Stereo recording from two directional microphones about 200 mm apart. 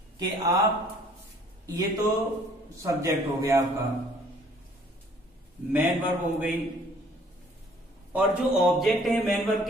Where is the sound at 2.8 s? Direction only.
15° right (ahead or behind).